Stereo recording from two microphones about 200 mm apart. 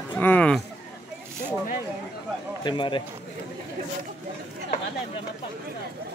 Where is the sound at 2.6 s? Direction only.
25° left (ahead or behind).